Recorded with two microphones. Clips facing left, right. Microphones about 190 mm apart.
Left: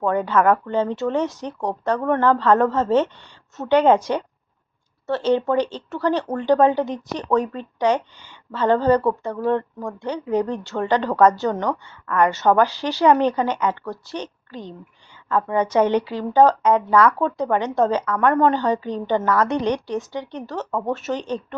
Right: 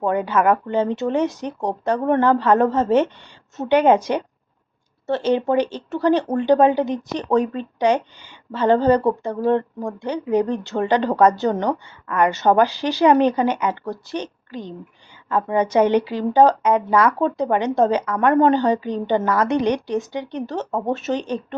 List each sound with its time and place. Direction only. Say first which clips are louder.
0.0 s a woman's voice: even; 15° right (ahead or behind)